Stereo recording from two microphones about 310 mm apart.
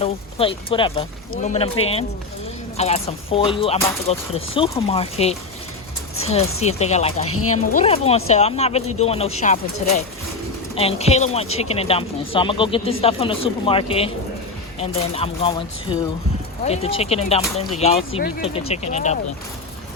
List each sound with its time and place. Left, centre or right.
0.0 s speech: centre
2.7 s speech: centre
7.3 s speech: left
7.5 s speech: left